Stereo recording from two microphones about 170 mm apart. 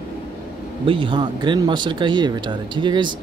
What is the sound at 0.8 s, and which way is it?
Speech, 30° right (ahead or behind).